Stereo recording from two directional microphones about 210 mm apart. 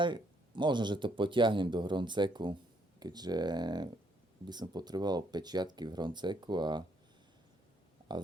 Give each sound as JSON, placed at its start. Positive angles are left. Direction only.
{"t": 0.0, "sound": "speech", "side_deg": -20}